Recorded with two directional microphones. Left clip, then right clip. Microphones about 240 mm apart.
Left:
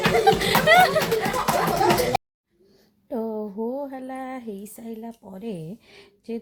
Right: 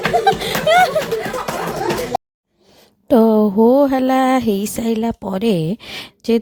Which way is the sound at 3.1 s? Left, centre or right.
Right.